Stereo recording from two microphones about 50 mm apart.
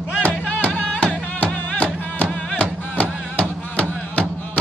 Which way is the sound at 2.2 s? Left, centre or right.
Left.